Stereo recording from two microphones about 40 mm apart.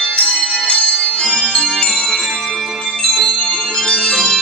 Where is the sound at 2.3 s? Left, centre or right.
Centre.